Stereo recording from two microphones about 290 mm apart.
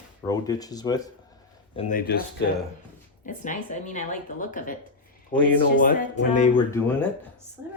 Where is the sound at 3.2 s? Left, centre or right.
Left.